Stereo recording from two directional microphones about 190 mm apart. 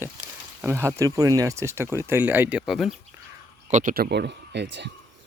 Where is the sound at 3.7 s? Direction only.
40° right (ahead or behind); by 4.9 s 65° right (ahead or behind).